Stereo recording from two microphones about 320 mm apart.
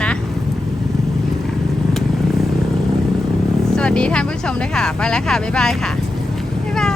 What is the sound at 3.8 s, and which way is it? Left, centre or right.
Speech, centre.